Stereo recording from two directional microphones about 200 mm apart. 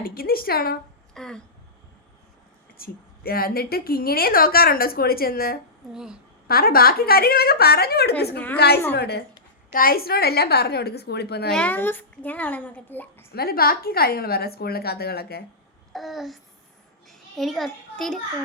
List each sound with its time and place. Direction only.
0.0 s a woman's voice: 50° left (ahead or behind)
1.1 s a sound: 5° left (ahead or behind)
2.7 s a woman's voice: 50° left (ahead or behind)
5.9 s babbling: 5° right (ahead or behind)
6.5 s a woman's voice: 50° left (ahead or behind)
11.5 s a child's voice: 10° left (ahead or behind)
13.3 s a woman's voice: 50° left (ahead or behind)
15.9 s babbling: centre (ahead or behind)
17.1 s a sound: centre (ahead or behind)